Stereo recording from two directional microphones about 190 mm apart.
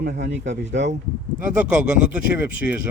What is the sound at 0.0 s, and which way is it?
Speech, 60° right (ahead or behind).